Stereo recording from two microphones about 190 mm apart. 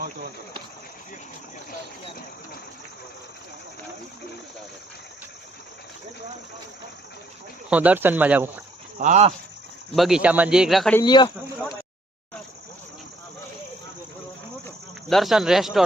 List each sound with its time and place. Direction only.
7.7 s speech: 10° right (ahead or behind)
9.0 s speech: 40° right (ahead or behind)
9.9 s speech: centre (ahead or behind)
11.0 s speech: 25° left (ahead or behind)
15.1 s speech: centre (ahead or behind)